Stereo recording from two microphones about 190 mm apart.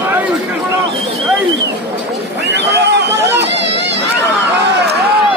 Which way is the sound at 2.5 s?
65° right (ahead or behind).